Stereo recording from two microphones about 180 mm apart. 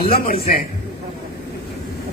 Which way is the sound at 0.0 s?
55° left (ahead or behind).